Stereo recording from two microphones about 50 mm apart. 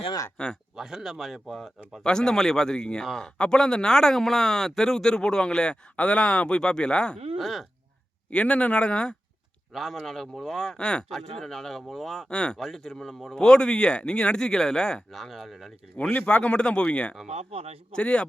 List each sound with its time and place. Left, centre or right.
0.4 s speech: centre
0.8 s speech: centre
2.0 s speech: centre
7.3 s speech: centre
8.3 s speech: left
9.7 s speech: centre
15.1 s speech: centre
16.2 s speech: left